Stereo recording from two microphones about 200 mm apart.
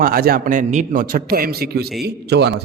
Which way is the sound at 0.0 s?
45° right (ahead or behind).